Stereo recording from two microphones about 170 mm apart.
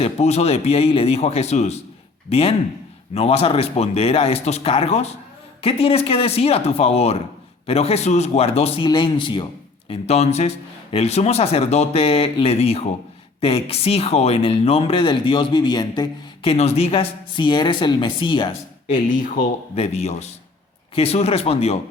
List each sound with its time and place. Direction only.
0.0 s speech: 40° left (ahead or behind)
9.9 s speech: 40° left (ahead or behind)
18.9 s speech: 50° left (ahead or behind)
19.7 s speech: 35° left (ahead or behind)